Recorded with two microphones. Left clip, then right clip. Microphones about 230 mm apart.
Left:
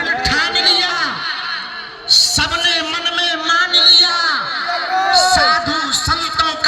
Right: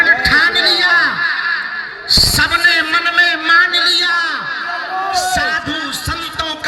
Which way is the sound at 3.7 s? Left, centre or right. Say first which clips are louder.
Left 3 dB; centre.